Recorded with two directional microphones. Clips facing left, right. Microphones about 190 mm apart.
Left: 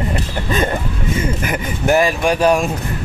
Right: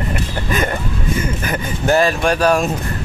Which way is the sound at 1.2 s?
20° left (ahead or behind).